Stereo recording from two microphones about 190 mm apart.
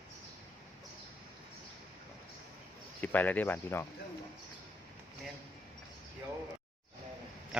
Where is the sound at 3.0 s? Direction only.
10° left (ahead or behind).